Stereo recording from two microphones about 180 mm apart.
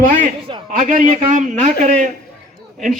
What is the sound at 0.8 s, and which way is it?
Speech, 45° right (ahead or behind).